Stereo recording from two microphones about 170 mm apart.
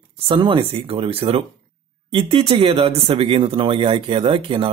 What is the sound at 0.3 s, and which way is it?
Speech, 30° right (ahead or behind).